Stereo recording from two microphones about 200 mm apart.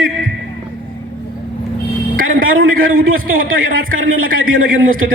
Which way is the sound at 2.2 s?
45° right (ahead or behind).